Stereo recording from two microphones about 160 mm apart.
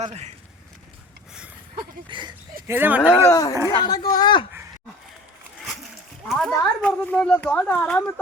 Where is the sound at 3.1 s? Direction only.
20° left (ahead or behind).